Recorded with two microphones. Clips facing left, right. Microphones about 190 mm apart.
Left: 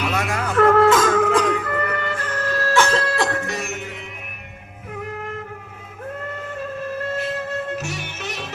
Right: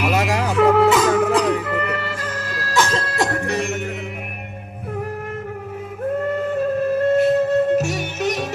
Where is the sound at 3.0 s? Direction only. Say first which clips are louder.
Even; 45° right (ahead or behind).